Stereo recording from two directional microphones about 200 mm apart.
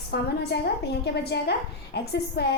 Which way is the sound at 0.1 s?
55° left (ahead or behind).